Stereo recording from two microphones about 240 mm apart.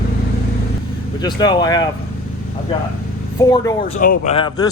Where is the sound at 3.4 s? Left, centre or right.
Centre.